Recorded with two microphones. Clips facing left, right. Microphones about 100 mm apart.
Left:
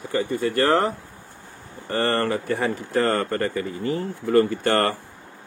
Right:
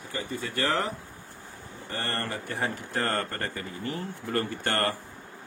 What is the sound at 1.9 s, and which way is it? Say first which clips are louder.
Speech: left 11 dB; 70° left (ahead or behind).